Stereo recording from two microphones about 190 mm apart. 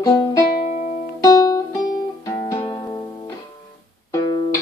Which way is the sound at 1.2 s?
20° left (ahead or behind).